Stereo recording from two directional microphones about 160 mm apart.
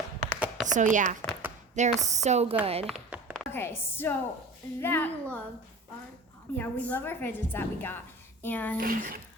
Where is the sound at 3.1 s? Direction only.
10° right (ahead or behind).